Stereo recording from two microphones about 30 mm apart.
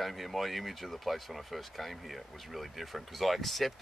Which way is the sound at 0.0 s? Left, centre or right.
Centre.